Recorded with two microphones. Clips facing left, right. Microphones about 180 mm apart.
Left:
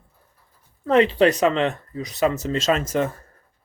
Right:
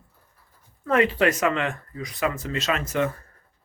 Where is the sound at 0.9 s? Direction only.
30° left (ahead or behind).